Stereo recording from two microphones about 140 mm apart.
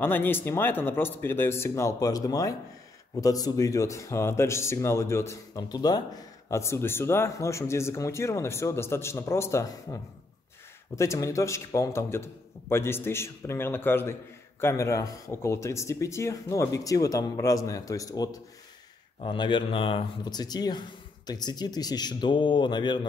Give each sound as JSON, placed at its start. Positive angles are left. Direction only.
{"t": 0.0, "sound": "a man's voice", "side_deg": 15}
{"t": 11.0, "sound": "a man's voice", "side_deg": 20}